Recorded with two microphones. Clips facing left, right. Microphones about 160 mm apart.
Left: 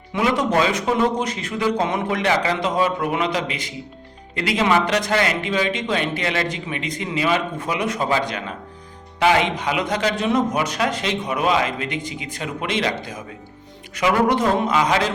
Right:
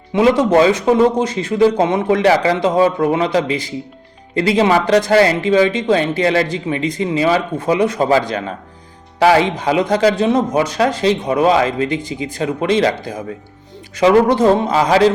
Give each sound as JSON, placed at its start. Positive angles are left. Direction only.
{"t": 0.1, "sound": "a man's voice", "side_deg": -25}